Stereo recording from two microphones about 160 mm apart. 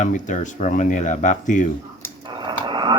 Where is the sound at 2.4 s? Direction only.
30° right (ahead or behind).